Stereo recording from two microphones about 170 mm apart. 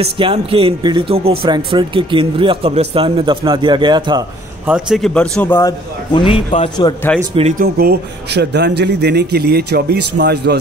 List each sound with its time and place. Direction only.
0.0 s speech: 30° right (ahead or behind)
4.6 s a man's voice: 5° right (ahead or behind); by 7.0 s 30° left (ahead or behind)
7.5 s a man's voice: 65° right (ahead or behind)